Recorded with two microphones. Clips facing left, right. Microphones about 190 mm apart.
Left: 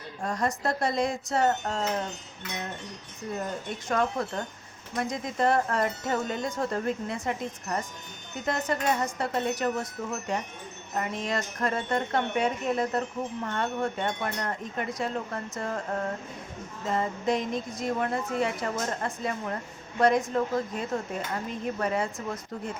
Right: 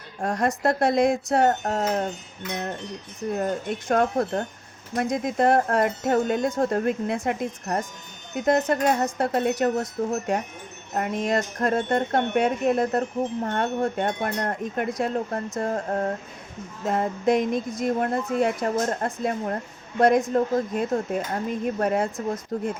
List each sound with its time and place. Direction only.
0.3 s a woman's voice: 85° right
0.9 s speech: 50° right (ahead or behind)
3.3 s speech: 55° right (ahead or behind)
9.6 s speech: 35° right (ahead or behind)
10.9 s speech: 50° right (ahead or behind)
16.8 s speech: 50° right (ahead or behind)